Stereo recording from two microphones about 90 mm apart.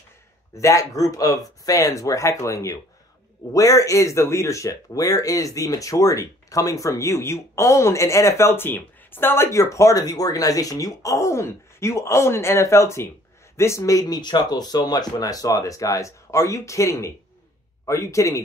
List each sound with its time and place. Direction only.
0.6 s speech: 35° left (ahead or behind)